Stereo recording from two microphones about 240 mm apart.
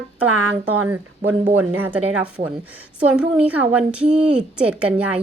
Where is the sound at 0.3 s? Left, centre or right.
Right.